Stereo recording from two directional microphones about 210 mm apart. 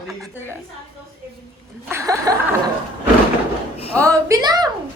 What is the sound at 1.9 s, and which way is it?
Chuckle, 15° right (ahead or behind).